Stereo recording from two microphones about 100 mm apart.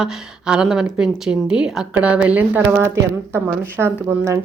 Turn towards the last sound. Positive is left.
turn(degrees=-25)  # may be behind; listen again after turning